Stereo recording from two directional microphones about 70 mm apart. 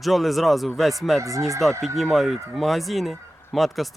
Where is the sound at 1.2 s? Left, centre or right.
Right.